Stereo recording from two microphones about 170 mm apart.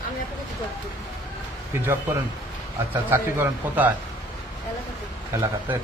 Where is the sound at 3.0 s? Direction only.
15° right (ahead or behind).